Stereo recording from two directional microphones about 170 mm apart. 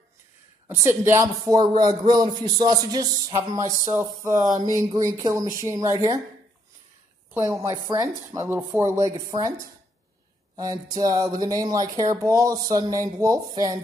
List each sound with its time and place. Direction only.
0.7 s a man's voice: 15° right (ahead or behind)
7.6 s a man's voice: 15° right (ahead or behind)